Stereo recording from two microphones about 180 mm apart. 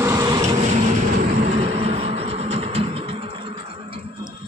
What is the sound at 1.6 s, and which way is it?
Vehicle, 35° right (ahead or behind).